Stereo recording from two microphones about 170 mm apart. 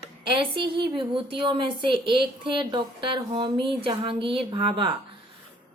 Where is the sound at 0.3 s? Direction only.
30° right (ahead or behind).